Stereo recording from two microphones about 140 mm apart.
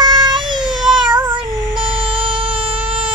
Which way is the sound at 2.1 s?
40° right (ahead or behind).